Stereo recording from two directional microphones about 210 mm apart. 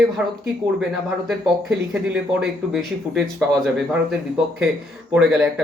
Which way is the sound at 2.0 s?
5° right (ahead or behind).